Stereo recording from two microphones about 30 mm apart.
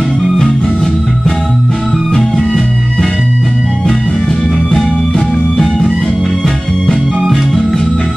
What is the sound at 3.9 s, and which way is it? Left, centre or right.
Music, left.